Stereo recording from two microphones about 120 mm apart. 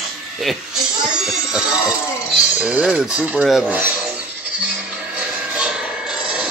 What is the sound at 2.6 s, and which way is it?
Speech, 5° right (ahead or behind).